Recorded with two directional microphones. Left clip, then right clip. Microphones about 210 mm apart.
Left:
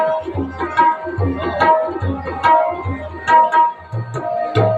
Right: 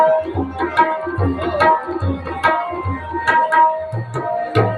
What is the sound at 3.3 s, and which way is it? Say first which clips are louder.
Tabla: left 3 dB; 35° right (ahead or behind).